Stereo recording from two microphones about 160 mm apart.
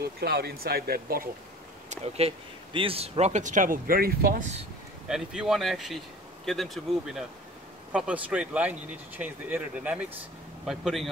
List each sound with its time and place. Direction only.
0.0 s speech: 80° right
1.9 s speech: 40° right (ahead or behind)
5.0 s speech: 5° right (ahead or behind)